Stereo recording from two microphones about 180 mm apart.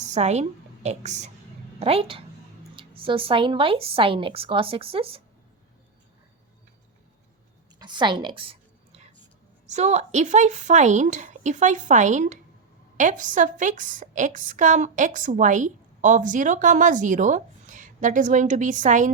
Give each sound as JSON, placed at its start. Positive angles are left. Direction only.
{"t": 0.0, "sound": "a woman's voice", "side_deg": -40}
{"t": 7.8, "sound": "a sound", "side_deg": -25}
{"t": 9.6, "sound": "a woman's voice", "side_deg": -40}